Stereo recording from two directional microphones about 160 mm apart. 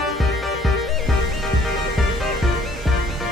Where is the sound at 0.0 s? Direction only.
Centre (ahead or behind).